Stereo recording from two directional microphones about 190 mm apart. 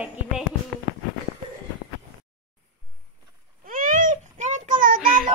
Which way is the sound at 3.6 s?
45° right (ahead or behind).